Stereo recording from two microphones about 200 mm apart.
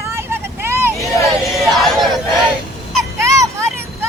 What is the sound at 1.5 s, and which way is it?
Crowd, centre (ahead or behind).